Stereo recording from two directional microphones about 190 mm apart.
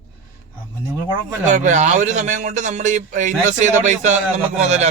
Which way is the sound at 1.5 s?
40° right (ahead or behind).